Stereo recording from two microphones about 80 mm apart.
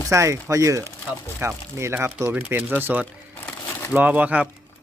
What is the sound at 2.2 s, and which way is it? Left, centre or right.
A man's voice, centre.